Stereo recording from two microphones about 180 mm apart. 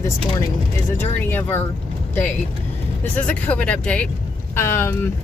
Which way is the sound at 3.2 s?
5° left (ahead or behind).